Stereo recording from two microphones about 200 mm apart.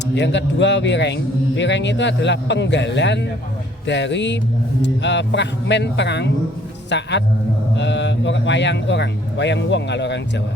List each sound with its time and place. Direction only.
0.1 s a man's voice: 60° left (ahead or behind)